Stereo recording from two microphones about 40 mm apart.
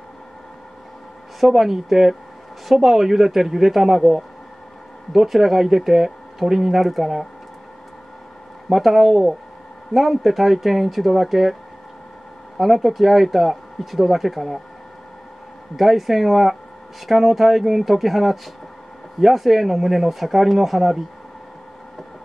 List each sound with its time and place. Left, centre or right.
1.4 s a woman's voice: centre
8.6 s speech: centre
12.5 s speech: centre
15.7 s speech: centre